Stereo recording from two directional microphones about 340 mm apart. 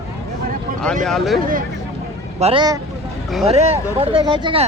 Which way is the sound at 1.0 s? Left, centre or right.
Centre.